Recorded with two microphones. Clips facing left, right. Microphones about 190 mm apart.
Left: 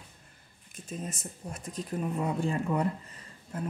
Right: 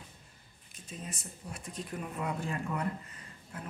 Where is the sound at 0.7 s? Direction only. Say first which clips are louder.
Left 6 dB; 45° left (ahead or behind).